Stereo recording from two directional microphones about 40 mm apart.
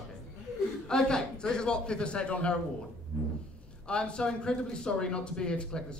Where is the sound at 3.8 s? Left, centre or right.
Left.